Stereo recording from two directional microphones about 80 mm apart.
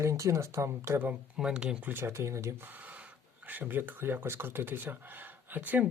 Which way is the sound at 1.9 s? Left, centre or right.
Right.